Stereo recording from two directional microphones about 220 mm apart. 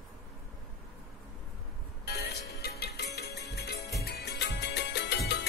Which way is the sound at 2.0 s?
45° left (ahead or behind).